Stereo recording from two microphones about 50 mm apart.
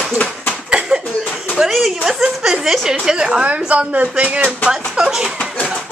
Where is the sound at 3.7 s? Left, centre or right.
Right.